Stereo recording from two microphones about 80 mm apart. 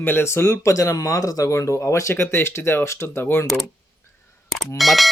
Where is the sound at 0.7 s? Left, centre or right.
Left.